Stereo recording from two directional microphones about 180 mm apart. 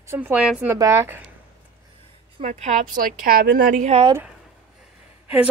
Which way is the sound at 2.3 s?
40° right (ahead or behind).